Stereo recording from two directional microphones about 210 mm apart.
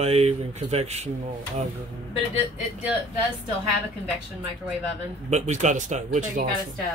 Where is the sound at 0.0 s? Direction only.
30° right (ahead or behind).